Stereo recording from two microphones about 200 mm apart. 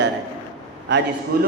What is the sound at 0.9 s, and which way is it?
Speech, 60° right (ahead or behind).